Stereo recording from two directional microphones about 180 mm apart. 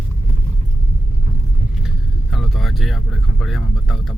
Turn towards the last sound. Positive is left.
turn(degrees=0)  # may be behind; listen again after turning